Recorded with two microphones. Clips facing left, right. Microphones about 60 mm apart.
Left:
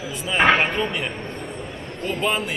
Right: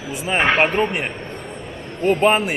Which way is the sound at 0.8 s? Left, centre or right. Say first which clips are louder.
Right 4 dB; right.